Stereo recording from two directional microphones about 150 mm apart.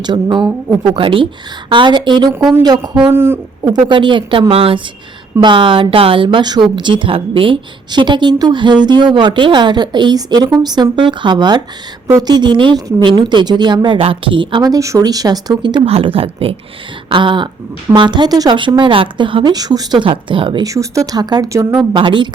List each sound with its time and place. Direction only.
0.0 s a woman's voice: 30° right (ahead or behind)
0.9 s a woman's voice: 35° right (ahead or behind); by 3.7 s 15° right (ahead or behind)
3.7 s a woman's voice: 30° right (ahead or behind)
21.9 s a woman's voice: 30° right (ahead or behind)